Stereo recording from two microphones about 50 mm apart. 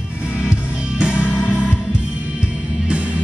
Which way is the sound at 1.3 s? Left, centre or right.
Left.